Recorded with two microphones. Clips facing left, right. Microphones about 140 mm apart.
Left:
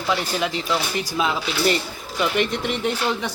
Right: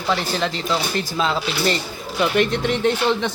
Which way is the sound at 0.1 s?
10° left (ahead or behind).